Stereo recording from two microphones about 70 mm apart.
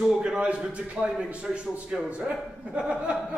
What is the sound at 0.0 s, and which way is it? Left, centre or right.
A man's voice, centre.